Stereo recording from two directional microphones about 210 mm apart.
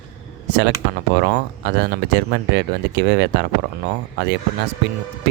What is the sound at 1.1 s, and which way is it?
Speech, 50° right (ahead or behind).